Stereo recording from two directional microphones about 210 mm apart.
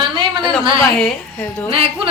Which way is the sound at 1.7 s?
25° right (ahead or behind).